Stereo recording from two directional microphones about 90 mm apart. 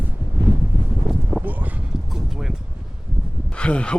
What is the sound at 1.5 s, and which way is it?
Clip-clop, 20° right (ahead or behind).